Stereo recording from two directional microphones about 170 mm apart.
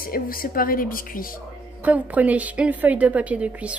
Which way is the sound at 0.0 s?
55° left (ahead or behind).